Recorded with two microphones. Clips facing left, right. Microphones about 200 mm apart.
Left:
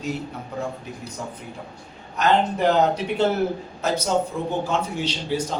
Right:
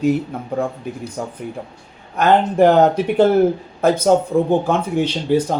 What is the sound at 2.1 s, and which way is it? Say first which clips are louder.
Speech: right 6 dB; 55° right (ahead or behind).